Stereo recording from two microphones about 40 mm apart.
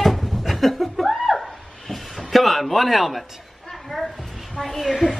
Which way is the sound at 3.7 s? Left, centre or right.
Centre.